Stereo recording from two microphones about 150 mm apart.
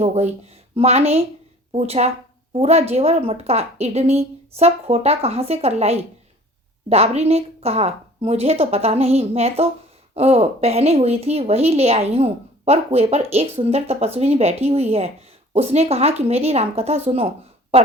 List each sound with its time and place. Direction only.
0.0 s a woman's voice: 45° right (ahead or behind)